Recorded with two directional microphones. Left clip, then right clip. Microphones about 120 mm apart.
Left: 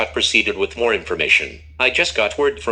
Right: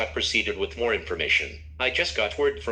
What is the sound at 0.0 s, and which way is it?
Speech, 35° left (ahead or behind).